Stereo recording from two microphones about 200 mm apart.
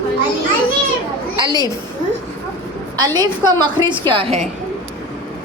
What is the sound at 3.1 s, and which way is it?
A woman's voice, 20° right (ahead or behind).